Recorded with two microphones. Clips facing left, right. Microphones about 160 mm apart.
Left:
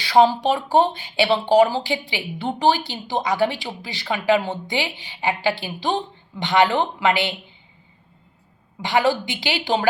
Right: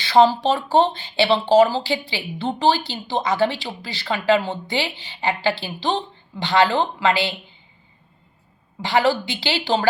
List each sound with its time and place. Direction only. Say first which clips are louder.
0.0 s speech: right 1 dB; 10° left (ahead or behind)
8.8 s speech: right 1 dB; 15° left (ahead or behind)